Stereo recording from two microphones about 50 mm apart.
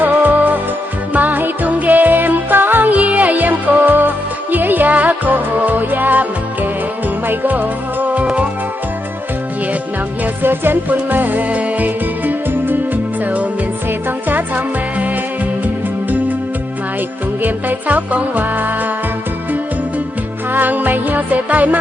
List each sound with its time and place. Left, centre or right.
0.0 s music: right
10.4 s music: right
17.4 s music: right
20.5 s music: right